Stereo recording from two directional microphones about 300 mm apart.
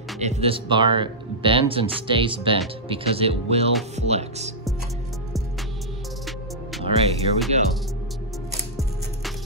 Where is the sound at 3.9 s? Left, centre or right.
Right.